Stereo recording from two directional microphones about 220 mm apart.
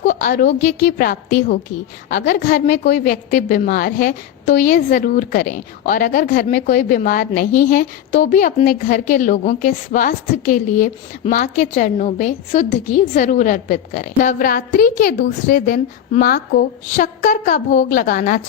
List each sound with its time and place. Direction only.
0.1 s a woman's voice: 35° left (ahead or behind)